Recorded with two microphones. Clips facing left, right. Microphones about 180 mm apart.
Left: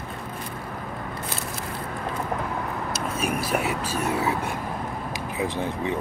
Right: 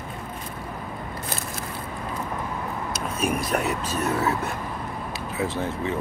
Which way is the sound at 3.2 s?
5° left (ahead or behind).